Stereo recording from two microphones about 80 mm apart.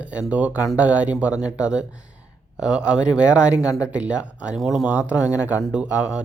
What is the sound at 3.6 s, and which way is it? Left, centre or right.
Speech, left.